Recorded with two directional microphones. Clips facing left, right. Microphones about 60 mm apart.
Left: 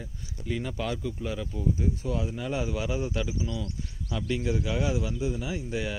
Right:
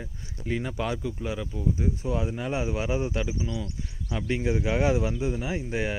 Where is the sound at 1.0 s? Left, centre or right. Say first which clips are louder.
Right 1 dB; centre.